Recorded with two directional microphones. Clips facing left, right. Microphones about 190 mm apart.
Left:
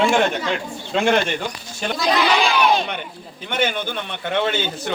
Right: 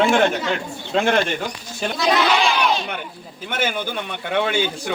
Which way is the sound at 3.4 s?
5° right (ahead or behind).